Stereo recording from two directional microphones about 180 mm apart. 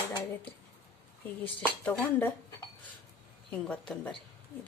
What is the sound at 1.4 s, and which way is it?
Speech, 10° left (ahead or behind).